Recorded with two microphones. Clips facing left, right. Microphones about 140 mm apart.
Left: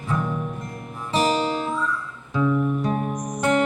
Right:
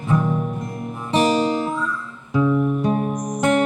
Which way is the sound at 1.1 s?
15° right (ahead or behind).